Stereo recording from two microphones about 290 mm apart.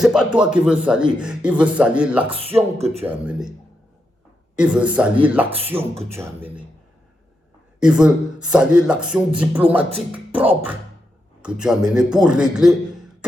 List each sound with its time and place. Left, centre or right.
0.0 s speech: centre
4.5 s speech: centre
7.8 s speech: centre